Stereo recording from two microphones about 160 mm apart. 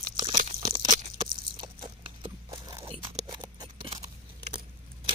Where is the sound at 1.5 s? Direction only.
30° right (ahead or behind).